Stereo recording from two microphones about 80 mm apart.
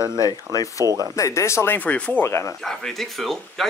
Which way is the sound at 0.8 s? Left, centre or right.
Right.